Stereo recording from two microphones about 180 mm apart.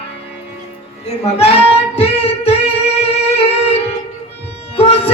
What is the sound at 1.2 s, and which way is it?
Child singing, 35° left (ahead or behind).